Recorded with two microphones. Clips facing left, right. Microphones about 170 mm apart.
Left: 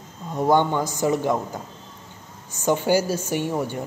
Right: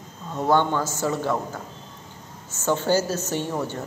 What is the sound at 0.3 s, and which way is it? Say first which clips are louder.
A woman's voice: left 2 dB; 15° left (ahead or behind).